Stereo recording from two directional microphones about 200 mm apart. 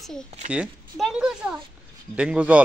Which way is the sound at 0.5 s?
Centre (ahead or behind).